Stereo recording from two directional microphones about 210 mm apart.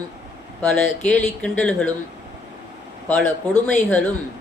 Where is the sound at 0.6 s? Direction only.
5° left (ahead or behind).